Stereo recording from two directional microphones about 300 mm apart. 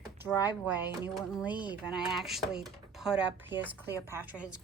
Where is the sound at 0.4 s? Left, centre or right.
Centre.